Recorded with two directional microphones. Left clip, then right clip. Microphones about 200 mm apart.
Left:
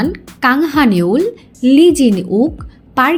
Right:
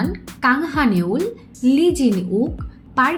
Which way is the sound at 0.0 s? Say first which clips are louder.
Left 5 dB; 45° left (ahead or behind).